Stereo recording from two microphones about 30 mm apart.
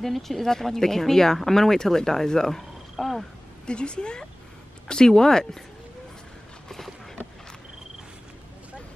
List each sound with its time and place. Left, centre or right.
0.0 s speech: centre
2.5 s frog: centre
3.6 s a woman's voice: left